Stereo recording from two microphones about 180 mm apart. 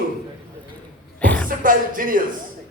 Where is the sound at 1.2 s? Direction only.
10° left (ahead or behind).